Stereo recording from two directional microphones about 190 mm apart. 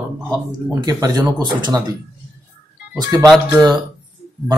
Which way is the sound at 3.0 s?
20° right (ahead or behind).